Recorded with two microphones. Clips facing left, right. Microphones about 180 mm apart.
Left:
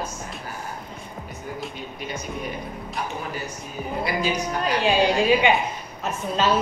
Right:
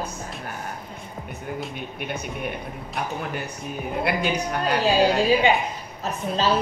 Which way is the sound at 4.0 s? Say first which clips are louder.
Right 1 dB; 60° right (ahead or behind).